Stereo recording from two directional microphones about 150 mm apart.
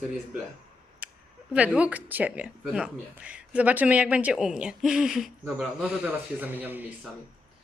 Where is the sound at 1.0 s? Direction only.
10° right (ahead or behind).